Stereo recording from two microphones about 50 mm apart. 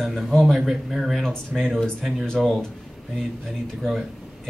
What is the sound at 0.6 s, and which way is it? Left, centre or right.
Speech, centre.